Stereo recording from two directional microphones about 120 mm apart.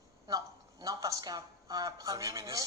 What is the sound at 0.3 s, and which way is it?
Speech, 30° right (ahead or behind).